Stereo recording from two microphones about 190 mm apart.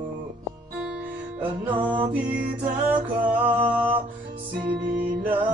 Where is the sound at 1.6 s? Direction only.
25° right (ahead or behind).